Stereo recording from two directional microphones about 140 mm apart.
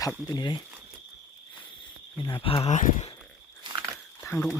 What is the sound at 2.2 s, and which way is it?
Speech, 35° left (ahead or behind).